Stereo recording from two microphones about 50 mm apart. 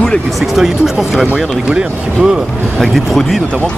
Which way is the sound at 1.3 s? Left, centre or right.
Centre.